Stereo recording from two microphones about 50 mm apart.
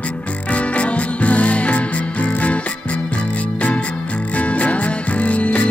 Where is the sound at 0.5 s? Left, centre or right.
Left.